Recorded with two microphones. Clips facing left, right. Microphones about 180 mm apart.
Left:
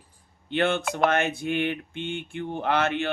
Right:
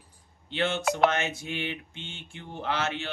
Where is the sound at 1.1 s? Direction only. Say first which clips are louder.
Left 6 dB; 55° left (ahead or behind).